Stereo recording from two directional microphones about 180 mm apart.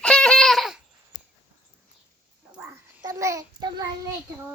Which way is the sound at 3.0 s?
20° right (ahead or behind).